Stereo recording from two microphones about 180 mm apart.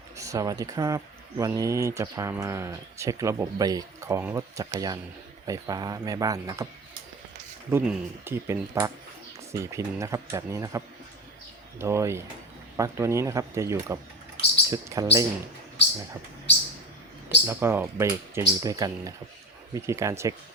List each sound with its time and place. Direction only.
0.2 s a man's voice: 20° right (ahead or behind)
7.7 s speech: 10° right (ahead or behind)
17.2 s speech: 10° right (ahead or behind)